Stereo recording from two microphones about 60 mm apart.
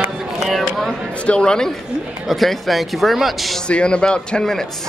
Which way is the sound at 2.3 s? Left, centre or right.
Centre.